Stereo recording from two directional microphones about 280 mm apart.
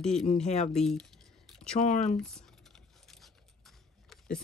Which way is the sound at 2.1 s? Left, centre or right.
Centre.